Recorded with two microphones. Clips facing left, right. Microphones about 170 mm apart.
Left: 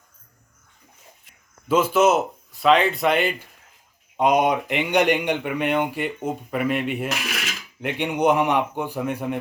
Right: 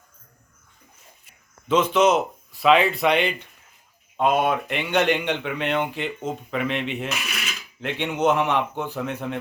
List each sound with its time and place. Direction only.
1.6 s speech: 5° left (ahead or behind)
4.2 s speech: 15° left (ahead or behind)
7.1 s dishes: 85° left
7.8 s speech: 10° left (ahead or behind)